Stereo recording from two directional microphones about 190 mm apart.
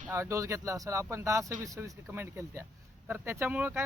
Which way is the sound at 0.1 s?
15° right (ahead or behind).